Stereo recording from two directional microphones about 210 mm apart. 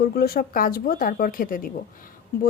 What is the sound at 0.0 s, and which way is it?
Speech, 45° left (ahead or behind).